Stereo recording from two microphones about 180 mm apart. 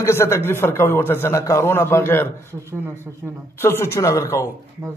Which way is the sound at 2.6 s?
15° right (ahead or behind).